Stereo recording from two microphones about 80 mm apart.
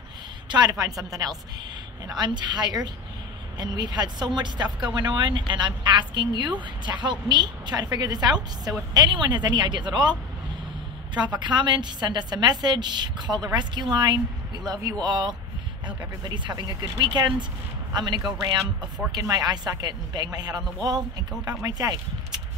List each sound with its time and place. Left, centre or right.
0.5 s a woman's voice: right
2.0 s a man's voice: right
8.9 s speech: right
11.3 s a man's voice: right
14.7 s a man's voice: right
19.1 s a man's voice: right